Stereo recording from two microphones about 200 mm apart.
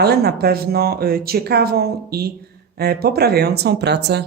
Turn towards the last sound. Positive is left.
turn(degrees=-55)  # may be behind; listen again after turning